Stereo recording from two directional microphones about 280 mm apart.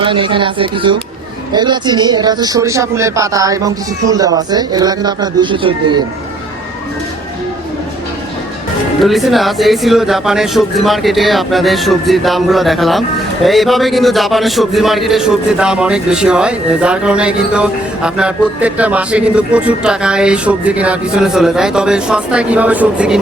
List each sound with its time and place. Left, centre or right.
0.0 s speech: centre
9.0 s speech: centre